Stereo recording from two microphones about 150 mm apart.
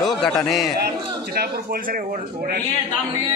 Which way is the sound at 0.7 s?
90° right.